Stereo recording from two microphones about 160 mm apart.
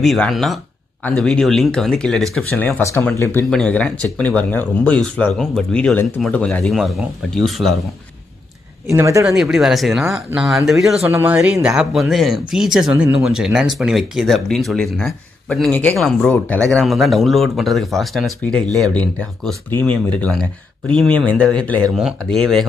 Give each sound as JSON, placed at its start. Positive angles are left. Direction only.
{"t": 0.0, "sound": "speech", "side_deg": 0}
{"t": 2.5, "sound": "speech", "side_deg": 15}
{"t": 3.4, "sound": "speech", "side_deg": 5}
{"t": 8.8, "sound": "speech", "side_deg": -20}
{"t": 9.4, "sound": "speech", "side_deg": 0}
{"t": 11.1, "sound": "speech", "side_deg": -15}
{"t": 11.3, "sound": "speech", "side_deg": -5}